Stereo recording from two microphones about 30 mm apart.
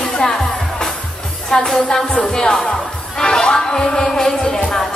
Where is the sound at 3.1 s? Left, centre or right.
Left.